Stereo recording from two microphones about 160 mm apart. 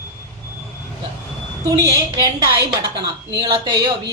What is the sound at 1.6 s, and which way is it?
Speech, 20° right (ahead or behind).